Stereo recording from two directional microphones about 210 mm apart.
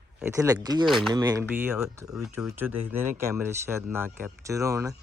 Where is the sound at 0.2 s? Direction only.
10° right (ahead or behind).